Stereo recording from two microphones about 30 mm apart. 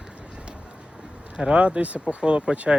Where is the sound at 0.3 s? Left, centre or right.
Right.